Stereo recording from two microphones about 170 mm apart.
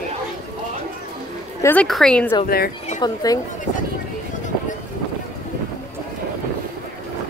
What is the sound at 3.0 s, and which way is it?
Speech, 25° left (ahead or behind).